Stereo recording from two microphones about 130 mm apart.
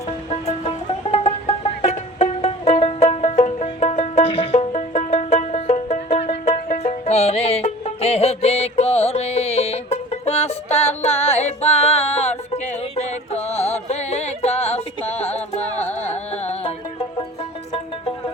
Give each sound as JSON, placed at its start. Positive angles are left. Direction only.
{"t": 0.3, "sound": "music", "side_deg": 50}
{"t": 15.8, "sound": "music", "side_deg": 10}
{"t": 16.3, "sound": "music", "side_deg": 55}